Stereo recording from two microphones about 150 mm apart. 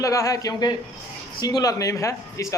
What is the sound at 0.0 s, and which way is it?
Speech, 20° left (ahead or behind).